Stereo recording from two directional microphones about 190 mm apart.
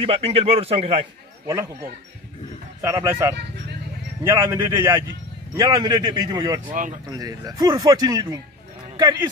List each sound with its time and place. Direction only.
0.0 s a man's voice: 30° right (ahead or behind)
1.5 s speech: 15° right (ahead or behind)
2.8 s speech: 15° right (ahead or behind)
6.7 s speech: 45° right (ahead or behind)
7.1 s speech: 20° right (ahead or behind)